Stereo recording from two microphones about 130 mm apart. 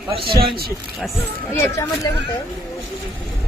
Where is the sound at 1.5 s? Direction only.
25° left (ahead or behind).